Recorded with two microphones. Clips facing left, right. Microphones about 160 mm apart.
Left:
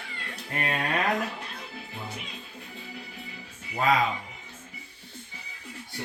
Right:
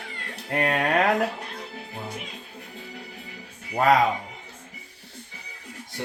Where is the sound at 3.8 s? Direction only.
60° right (ahead or behind).